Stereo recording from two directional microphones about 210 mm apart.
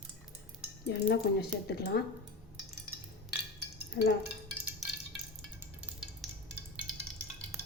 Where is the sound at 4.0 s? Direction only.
50° left (ahead or behind).